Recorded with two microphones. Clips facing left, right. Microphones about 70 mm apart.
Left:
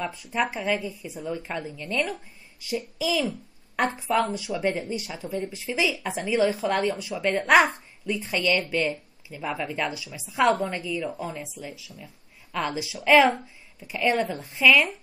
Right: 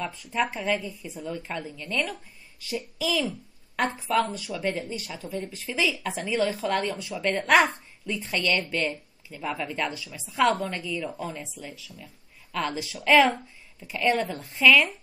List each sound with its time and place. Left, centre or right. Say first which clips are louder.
0.0 s a woman's voice: left 1 dB; centre
4.1 s speech: left 1 dB; centre
5.3 s a woman's voice: left 3 dB; centre